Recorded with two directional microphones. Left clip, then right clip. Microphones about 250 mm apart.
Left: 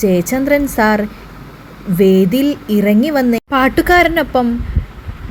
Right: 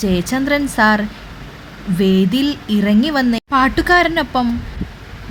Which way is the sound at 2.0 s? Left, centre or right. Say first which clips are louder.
Left 6 dB; right.